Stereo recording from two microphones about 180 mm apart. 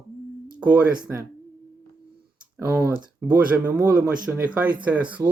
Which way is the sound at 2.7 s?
15° right (ahead or behind).